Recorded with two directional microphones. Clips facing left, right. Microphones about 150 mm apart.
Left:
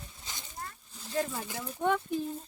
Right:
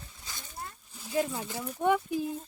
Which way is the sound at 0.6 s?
10° right (ahead or behind).